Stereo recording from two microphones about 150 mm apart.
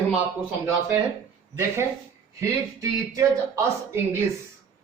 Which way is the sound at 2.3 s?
20° right (ahead or behind).